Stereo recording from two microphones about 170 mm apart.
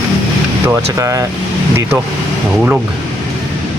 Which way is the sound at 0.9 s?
20° right (ahead or behind).